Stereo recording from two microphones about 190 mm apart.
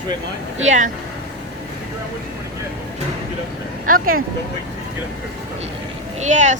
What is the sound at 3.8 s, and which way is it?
Speech, 50° right (ahead or behind).